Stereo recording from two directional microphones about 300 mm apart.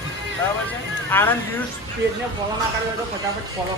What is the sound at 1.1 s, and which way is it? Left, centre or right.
Speech, centre.